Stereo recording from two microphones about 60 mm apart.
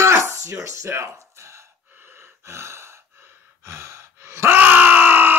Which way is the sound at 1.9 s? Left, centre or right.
Right.